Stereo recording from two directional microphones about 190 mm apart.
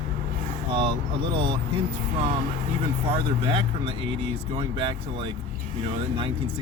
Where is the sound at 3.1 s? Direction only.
30° right (ahead or behind).